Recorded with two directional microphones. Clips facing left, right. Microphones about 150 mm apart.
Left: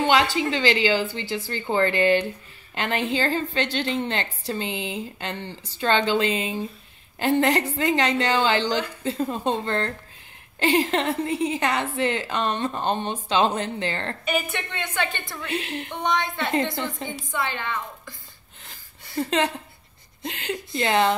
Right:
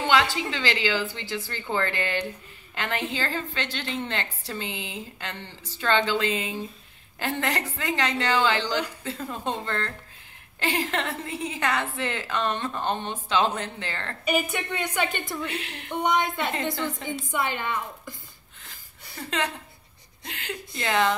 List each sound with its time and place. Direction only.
0.0 s a woman's voice: 20° left (ahead or behind)
14.2 s a woman's voice: 10° right (ahead or behind)
16.5 s a woman's voice: 20° left (ahead or behind)
17.3 s a woman's voice: 15° right (ahead or behind)
20.2 s a woman's voice: 25° left (ahead or behind)